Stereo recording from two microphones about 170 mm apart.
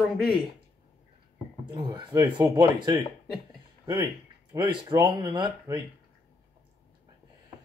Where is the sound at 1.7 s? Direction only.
25° right (ahead or behind).